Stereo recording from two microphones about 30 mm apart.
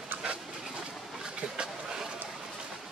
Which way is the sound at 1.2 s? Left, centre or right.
Right.